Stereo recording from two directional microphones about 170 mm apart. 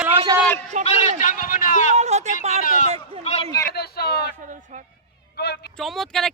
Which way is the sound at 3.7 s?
70° left (ahead or behind).